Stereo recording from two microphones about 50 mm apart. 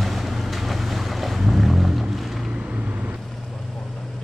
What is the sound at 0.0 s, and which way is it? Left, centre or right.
Boat, centre.